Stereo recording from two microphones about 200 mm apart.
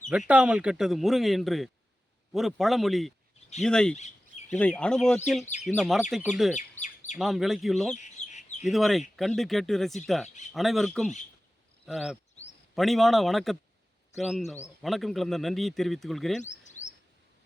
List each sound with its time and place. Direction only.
0.1 s speech: 5° right (ahead or behind)
3.9 s a sound: 35° left (ahead or behind)
4.5 s speech: 5° left (ahead or behind)
6.6 s chirp: 35° left (ahead or behind)
7.2 s speech: centre (ahead or behind)
7.9 s bird: 35° left (ahead or behind)
8.6 s speech: centre (ahead or behind)
16.4 s bird: 35° left (ahead or behind)